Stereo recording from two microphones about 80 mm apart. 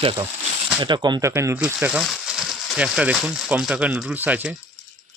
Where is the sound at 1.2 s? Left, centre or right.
Right.